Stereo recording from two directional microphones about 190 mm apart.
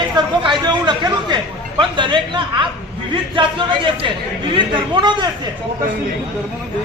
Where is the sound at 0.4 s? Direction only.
25° right (ahead or behind).